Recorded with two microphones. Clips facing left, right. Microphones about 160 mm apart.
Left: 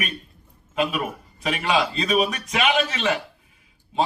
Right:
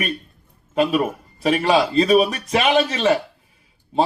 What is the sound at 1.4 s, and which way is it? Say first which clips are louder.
A man's voice: right 6 dB; 35° right (ahead or behind).